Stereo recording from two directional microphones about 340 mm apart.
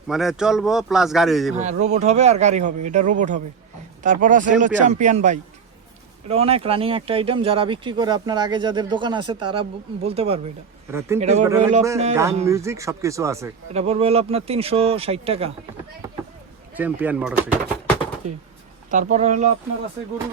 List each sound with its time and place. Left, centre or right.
0.1 s speech: centre
1.5 s speech: centre
11.4 s speech: centre
16.7 s speech: centre
18.9 s speech: right